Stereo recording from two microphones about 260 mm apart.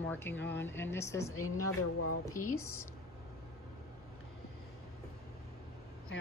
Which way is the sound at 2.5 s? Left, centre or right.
Centre.